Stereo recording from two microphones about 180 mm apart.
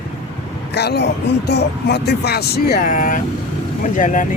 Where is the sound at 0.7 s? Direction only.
65° left (ahead or behind).